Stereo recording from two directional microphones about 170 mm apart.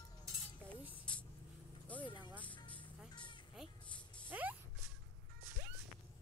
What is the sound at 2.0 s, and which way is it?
Music, 25° left (ahead or behind).